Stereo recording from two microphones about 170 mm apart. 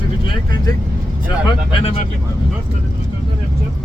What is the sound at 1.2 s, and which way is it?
Speech, 30° left (ahead or behind).